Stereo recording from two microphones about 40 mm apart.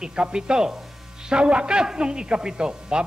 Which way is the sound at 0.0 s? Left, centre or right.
Right.